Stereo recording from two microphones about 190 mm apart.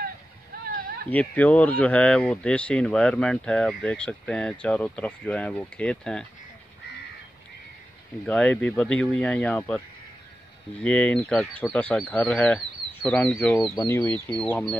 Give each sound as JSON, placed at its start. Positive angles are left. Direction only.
{"t": 0.7, "sound": "a sound", "side_deg": -45}
{"t": 1.1, "sound": "speech", "side_deg": 10}
{"t": 8.3, "sound": "speech", "side_deg": 5}
{"t": 10.8, "sound": "speech", "side_deg": 5}
{"t": 13.7, "sound": "speech", "side_deg": 15}
{"t": 14.3, "sound": "speech", "side_deg": 5}